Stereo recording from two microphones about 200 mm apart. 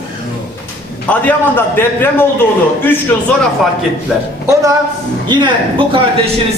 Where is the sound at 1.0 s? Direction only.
10° left (ahead or behind).